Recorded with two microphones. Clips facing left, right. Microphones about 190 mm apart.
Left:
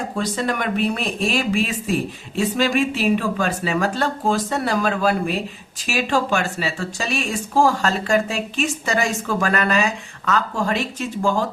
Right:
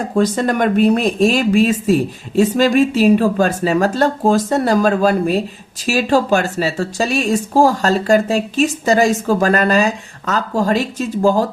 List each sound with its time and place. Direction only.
0.2 s speech: 45° right (ahead or behind)